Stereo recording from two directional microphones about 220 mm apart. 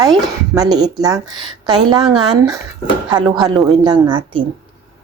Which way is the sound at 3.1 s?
20° right (ahead or behind).